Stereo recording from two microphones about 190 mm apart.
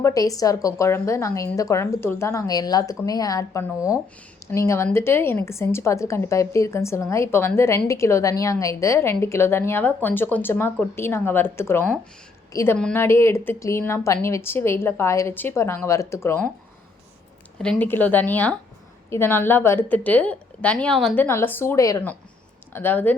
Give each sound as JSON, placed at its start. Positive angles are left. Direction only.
{"t": 0.0, "sound": "a woman's voice", "side_deg": 20}
{"t": 3.8, "sound": "speech", "side_deg": -5}
{"t": 4.5, "sound": "a woman's voice", "side_deg": 15}
{"t": 17.6, "sound": "a woman's voice", "side_deg": 5}
{"t": 21.2, "sound": "a woman's voice", "side_deg": 10}